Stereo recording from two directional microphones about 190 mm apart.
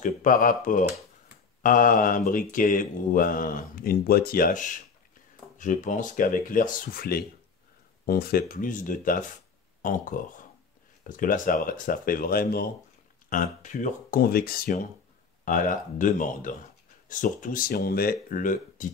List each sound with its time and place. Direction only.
0.0 s speech: 45° left (ahead or behind)